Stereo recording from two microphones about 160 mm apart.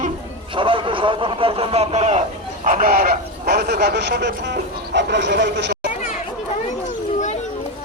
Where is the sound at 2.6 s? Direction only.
60° right (ahead or behind); by 5.9 s 90° right.